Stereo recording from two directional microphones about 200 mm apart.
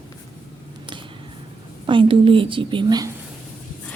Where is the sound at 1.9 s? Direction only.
25° right (ahead or behind).